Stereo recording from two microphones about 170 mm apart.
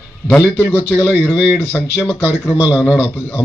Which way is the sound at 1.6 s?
15° left (ahead or behind).